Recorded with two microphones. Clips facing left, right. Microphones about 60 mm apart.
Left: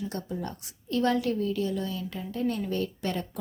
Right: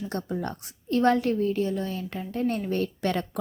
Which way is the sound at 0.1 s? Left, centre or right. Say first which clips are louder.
Right 4 dB; right.